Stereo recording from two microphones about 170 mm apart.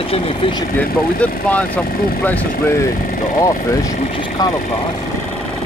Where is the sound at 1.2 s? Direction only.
10° left (ahead or behind).